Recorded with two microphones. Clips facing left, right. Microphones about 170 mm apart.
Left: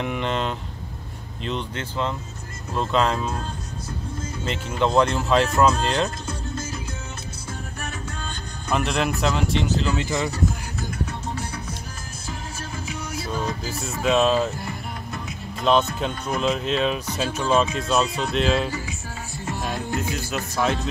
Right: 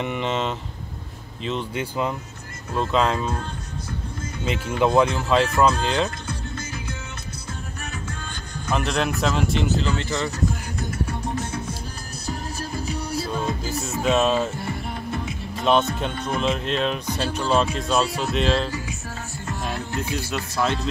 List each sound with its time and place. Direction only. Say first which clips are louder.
0.0 s speech: even; centre (ahead or behind)
4.5 s speech: right 2 dB; 5° right (ahead or behind)
8.7 s speech: even; centre (ahead or behind)
9.9 s speech: left 1 dB; 15° left (ahead or behind)
12.3 s music: right 4 dB; 35° right (ahead or behind)
13.7 s speech: even; centre (ahead or behind)
14.6 s music: right 3 dB; 25° right (ahead or behind)
15.6 s speech: even; centre (ahead or behind)
19.6 s music: left 1 dB; 5° left (ahead or behind)